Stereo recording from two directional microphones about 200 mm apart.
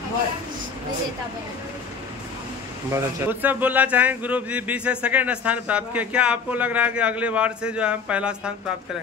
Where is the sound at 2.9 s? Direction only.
10° right (ahead or behind).